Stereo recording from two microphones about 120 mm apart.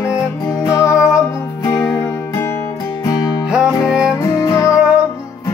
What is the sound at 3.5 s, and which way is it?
Music, 5° right (ahead or behind).